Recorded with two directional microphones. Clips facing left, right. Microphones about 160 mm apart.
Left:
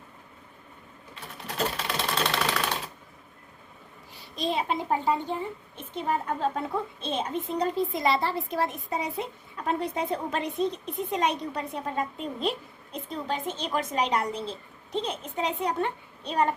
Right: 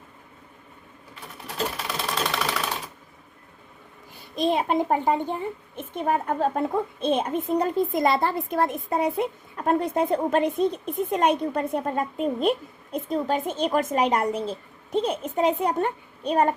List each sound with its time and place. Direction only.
1.7 s sewing machine: 5° right (ahead or behind)
4.1 s a child's voice: 50° right (ahead or behind)